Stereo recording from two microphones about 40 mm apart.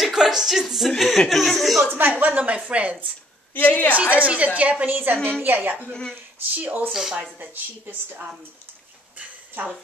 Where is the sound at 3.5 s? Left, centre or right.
Left.